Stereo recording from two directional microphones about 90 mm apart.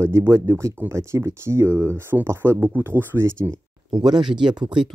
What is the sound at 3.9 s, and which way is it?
Speech, 55° right (ahead or behind).